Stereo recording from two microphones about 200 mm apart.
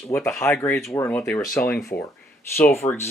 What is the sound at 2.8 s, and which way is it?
Speech, 25° left (ahead or behind).